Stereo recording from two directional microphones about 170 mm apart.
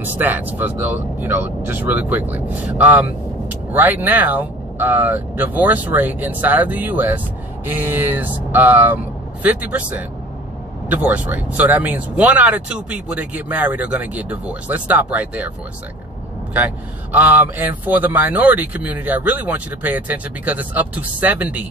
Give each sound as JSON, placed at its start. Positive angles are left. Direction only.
{"t": 0.0, "sound": "speech", "side_deg": -10}
{"t": 16.5, "sound": "speech", "side_deg": -10}